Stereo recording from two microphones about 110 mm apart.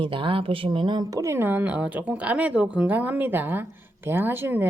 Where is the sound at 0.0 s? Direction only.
50° right (ahead or behind).